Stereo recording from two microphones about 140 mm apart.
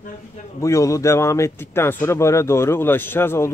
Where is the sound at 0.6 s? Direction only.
20° left (ahead or behind).